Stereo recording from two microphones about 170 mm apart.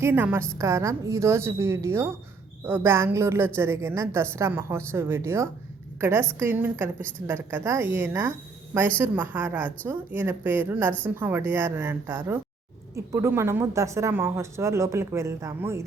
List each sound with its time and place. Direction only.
0.0 s a woman's voice: 15° right (ahead or behind)